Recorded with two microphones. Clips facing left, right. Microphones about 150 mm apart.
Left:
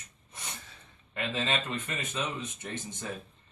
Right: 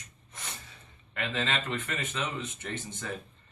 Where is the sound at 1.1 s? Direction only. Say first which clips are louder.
Even; 15° left (ahead or behind).